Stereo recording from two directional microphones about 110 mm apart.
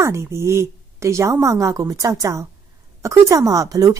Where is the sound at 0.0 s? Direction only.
25° right (ahead or behind).